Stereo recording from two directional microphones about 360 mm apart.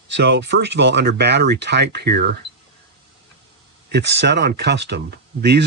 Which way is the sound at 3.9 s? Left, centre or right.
Right.